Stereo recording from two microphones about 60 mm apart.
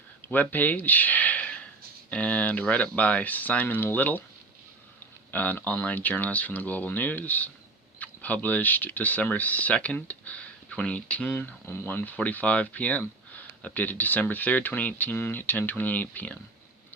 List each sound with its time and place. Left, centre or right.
0.3 s speech: left
5.3 s speech: left
11.6 s speech: left
11.9 s speech: left